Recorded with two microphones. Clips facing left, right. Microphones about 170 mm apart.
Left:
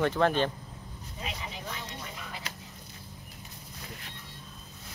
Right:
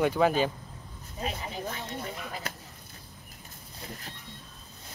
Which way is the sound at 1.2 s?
45° right (ahead or behind).